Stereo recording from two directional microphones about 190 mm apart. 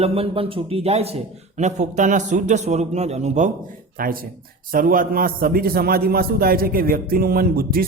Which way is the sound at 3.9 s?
50° right (ahead or behind).